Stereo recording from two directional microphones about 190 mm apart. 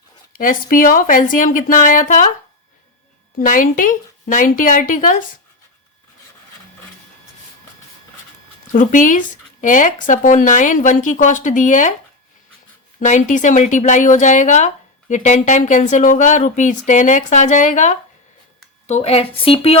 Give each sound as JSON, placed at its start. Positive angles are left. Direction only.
{"t": 0.3, "sound": "speech", "side_deg": 45}
{"t": 3.3, "sound": "speech", "side_deg": 45}
{"t": 8.7, "sound": "speech", "side_deg": 45}
{"t": 13.0, "sound": "speech", "side_deg": 40}